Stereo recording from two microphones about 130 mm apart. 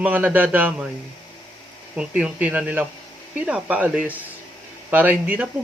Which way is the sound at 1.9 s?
10° right (ahead or behind).